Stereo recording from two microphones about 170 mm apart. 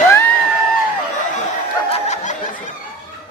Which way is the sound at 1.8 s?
40° left (ahead or behind).